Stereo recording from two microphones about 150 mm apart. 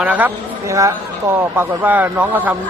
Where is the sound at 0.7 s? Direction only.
20° right (ahead or behind).